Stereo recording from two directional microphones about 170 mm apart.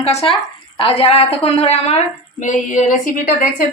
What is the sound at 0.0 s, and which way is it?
A woman's voice, 35° left (ahead or behind).